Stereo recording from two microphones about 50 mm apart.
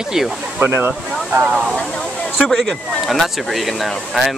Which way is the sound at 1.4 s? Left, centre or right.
Right.